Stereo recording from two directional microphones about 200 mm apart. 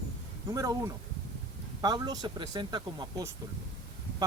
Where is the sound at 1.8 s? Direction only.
20° right (ahead or behind).